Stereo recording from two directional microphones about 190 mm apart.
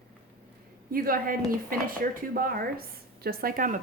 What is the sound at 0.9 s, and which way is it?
A woman's voice, 50° right (ahead or behind).